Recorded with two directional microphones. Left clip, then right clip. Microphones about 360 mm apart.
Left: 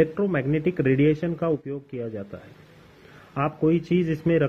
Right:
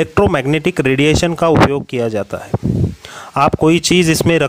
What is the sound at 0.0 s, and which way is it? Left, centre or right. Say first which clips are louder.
Speech: right 9 dB; right.